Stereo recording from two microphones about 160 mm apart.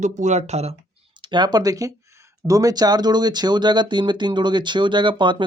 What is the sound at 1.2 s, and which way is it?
Speech, 30° right (ahead or behind).